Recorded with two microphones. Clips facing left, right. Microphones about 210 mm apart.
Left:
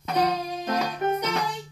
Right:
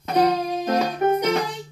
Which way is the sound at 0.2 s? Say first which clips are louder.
Right 6 dB; 40° right (ahead or behind).